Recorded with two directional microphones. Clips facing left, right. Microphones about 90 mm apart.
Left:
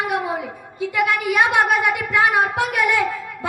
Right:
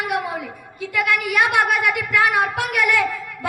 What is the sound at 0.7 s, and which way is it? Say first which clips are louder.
A woman's voice: left 2 dB; 20° left (ahead or behind).